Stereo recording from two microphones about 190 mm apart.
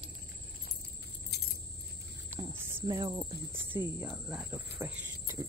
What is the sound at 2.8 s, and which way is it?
Speech, 25° right (ahead or behind).